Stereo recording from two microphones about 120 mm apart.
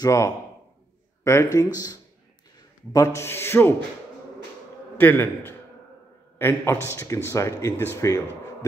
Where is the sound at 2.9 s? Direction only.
25° left (ahead or behind).